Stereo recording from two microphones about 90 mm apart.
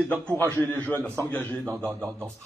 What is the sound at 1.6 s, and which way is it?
Speech, 30° right (ahead or behind).